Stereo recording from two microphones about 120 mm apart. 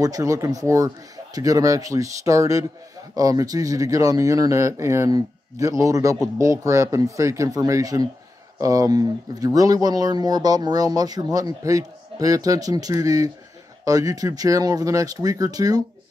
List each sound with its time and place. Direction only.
0.0 s speech: 30° right (ahead or behind)